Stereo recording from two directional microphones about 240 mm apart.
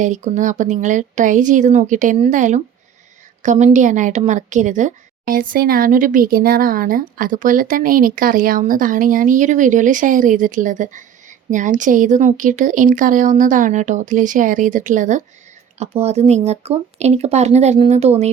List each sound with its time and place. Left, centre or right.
0.0 s a woman's voice: right